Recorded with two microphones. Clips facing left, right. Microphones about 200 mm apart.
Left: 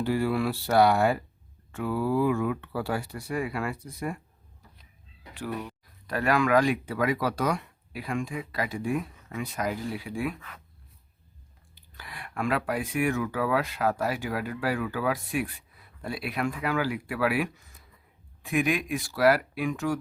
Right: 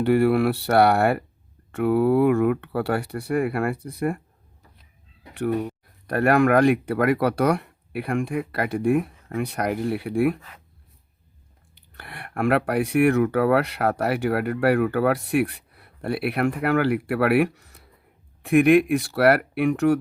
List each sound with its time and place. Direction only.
0.0 s speech: 65° right (ahead or behind)
5.5 s speech: 40° right (ahead or behind)
6.1 s speech: 60° right (ahead or behind)
11.9 s speech: 60° right (ahead or behind)